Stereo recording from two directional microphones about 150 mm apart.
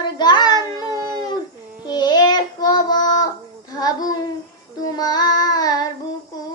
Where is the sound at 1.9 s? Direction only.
30° left (ahead or behind).